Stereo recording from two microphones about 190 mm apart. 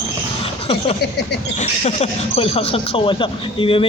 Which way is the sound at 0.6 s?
35° left (ahead or behind).